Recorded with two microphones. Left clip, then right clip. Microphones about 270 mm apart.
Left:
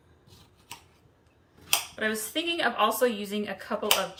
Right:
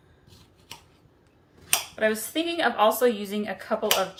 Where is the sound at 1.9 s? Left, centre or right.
Centre.